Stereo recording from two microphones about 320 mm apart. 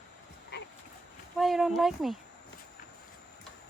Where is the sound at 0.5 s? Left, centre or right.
Left.